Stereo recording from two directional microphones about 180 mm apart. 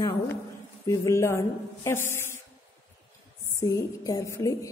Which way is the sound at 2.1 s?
15° left (ahead or behind).